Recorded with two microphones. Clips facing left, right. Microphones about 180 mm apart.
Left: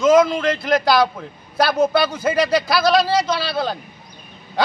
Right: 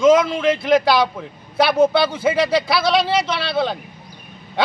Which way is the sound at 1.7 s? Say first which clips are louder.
Right 3 dB; 30° right (ahead or behind).